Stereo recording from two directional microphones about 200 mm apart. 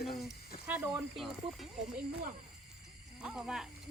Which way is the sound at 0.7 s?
5° right (ahead or behind).